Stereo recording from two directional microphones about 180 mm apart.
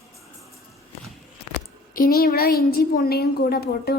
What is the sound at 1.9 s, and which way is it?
A woman's voice, 55° left (ahead or behind).